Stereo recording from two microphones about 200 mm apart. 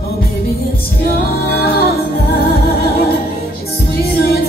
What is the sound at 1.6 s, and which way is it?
Music, 50° left (ahead or behind).